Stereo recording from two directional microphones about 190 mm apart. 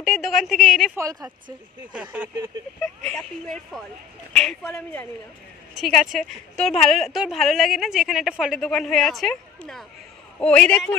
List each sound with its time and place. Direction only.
0.0 s a woman's voice: centre (ahead or behind)
0.9 s a woman's voice: 15° right (ahead or behind)
1.9 s a woman's voice: 5° right (ahead or behind)
3.1 s a woman's voice: 5° left (ahead or behind)